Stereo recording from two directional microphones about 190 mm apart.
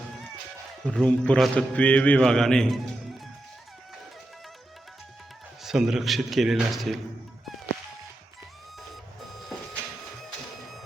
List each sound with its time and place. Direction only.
0.9 s a man's voice: 5° left (ahead or behind)
5.6 s a man's voice: centre (ahead or behind)